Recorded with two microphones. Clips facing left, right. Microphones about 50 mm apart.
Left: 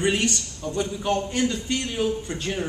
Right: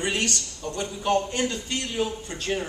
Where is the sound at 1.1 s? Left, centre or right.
Right.